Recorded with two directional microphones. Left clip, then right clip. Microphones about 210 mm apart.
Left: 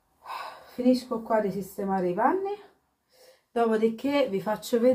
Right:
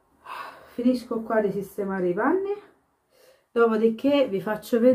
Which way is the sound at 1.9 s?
Centre (ahead or behind).